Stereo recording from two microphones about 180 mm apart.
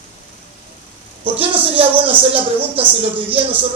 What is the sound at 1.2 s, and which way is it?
Speech, 30° right (ahead or behind).